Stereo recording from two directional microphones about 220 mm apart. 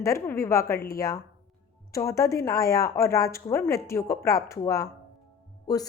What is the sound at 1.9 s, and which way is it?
A woman's voice, 15° left (ahead or behind).